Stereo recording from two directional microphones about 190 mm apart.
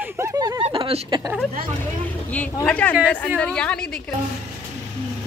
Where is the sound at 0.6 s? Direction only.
30° right (ahead or behind).